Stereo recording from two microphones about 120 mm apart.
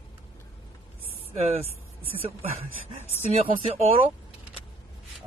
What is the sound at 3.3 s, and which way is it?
Speech, 55° right (ahead or behind).